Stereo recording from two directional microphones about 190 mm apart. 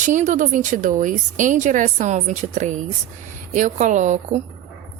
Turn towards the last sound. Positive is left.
turn(degrees=-40)  # may be behind; listen again after turning